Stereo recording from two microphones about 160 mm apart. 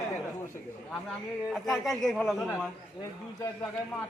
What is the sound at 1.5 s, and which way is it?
A man's voice, centre (ahead or behind).